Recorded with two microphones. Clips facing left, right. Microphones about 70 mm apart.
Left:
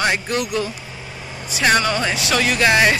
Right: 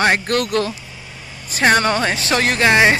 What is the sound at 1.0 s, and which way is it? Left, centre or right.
Vehicle, centre.